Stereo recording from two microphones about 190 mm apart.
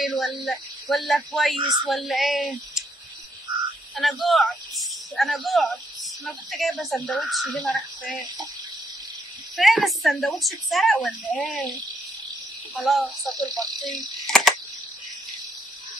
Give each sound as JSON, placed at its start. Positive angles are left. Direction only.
{"t": 0.0, "sound": "a woman's voice", "side_deg": 0}
{"t": 3.9, "sound": "a man's voice", "side_deg": 5}
{"t": 9.6, "sound": "a woman's voice", "side_deg": 0}
{"t": 12.7, "sound": "a woman's voice", "side_deg": 0}
{"t": 13.3, "sound": "speech", "side_deg": -20}
{"t": 14.2, "sound": "cricket", "side_deg": 0}